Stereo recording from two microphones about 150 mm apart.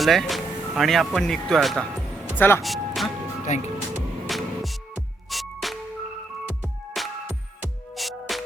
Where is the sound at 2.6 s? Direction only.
Centre (ahead or behind).